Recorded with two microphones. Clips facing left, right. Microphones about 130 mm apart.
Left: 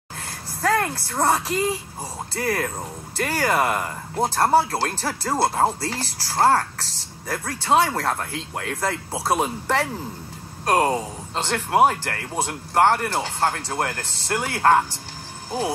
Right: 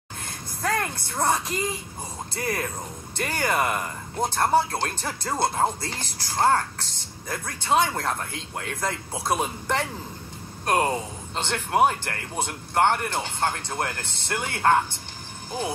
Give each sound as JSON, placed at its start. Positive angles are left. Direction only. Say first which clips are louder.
{"t": 0.7, "sound": "speech", "louder": "left 5 dB", "side_deg": 35}
{"t": 9.2, "sound": "speech", "louder": "left 3 dB", "side_deg": 35}